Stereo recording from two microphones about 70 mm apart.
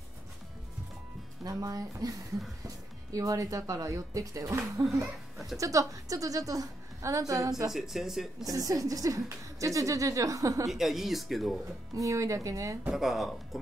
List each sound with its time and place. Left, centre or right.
1.4 s a woman's voice: right
5.6 s a woman's voice: right
7.7 s speech: centre
8.5 s a woman's voice: right
10.7 s speech: centre
11.9 s speech: right
12.9 s speech: centre